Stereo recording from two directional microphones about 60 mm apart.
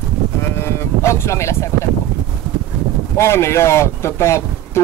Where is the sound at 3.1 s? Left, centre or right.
Left.